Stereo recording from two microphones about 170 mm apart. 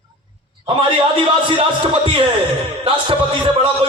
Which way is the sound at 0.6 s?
30° right (ahead or behind).